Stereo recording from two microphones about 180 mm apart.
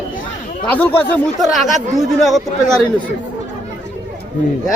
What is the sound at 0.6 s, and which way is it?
Speech, 10° left (ahead or behind).